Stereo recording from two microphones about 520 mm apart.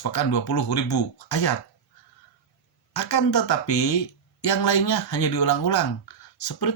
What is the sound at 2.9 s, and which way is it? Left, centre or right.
Speech, left.